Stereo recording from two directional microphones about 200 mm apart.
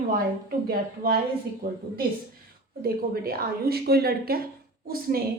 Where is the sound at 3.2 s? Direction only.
50° right (ahead or behind).